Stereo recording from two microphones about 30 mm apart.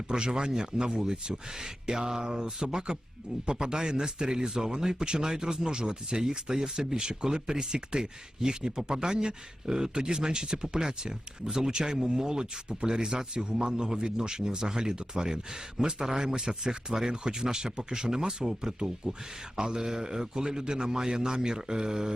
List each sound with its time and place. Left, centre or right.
0.1 s speech: right